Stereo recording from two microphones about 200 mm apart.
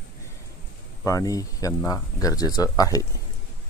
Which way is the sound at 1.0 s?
15° left (ahead or behind).